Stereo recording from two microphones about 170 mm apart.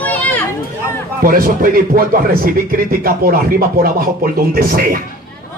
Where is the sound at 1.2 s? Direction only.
55° right (ahead or behind).